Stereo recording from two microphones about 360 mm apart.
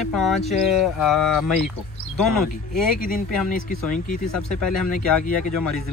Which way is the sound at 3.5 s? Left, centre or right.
Left.